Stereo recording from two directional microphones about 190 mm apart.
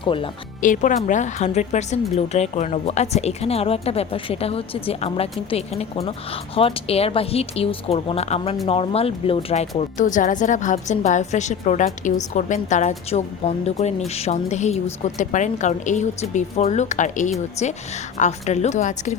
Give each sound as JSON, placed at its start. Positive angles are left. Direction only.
{"t": 0.0, "sound": "speech", "side_deg": 25}
{"t": 0.6, "sound": "speech", "side_deg": 45}